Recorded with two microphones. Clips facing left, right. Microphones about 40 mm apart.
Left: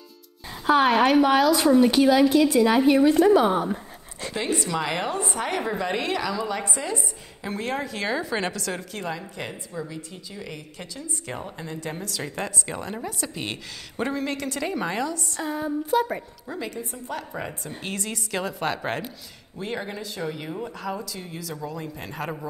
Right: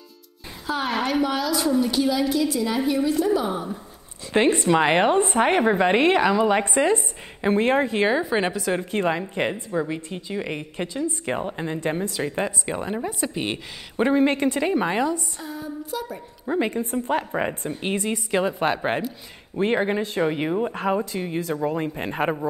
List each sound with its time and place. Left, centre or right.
0.7 s a woman's voice: left
4.3 s a woman's voice: right; by 8.8 s centre
8.9 s a woman's voice: right
15.4 s a woman's voice: left
16.4 s a woman's voice: right
19.5 s a woman's voice: right